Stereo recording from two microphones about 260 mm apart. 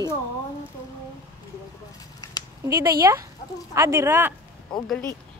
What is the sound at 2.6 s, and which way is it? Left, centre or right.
Speech, centre.